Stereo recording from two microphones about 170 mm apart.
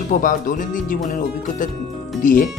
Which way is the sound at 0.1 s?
50° left (ahead or behind).